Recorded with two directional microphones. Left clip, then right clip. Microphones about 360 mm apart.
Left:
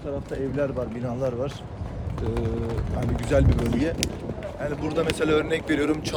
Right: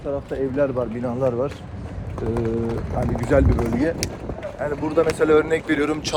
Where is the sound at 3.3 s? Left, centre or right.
Centre.